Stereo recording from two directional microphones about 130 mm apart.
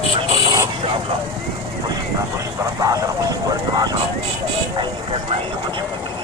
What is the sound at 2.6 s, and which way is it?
Speech, 25° right (ahead or behind).